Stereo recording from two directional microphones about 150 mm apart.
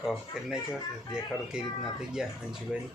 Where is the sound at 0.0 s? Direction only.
Centre (ahead or behind).